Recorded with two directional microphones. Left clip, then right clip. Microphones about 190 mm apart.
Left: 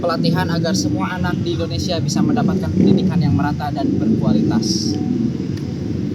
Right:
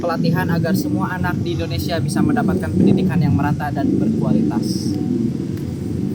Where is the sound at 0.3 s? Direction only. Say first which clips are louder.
Left 1 dB; 5° right (ahead or behind).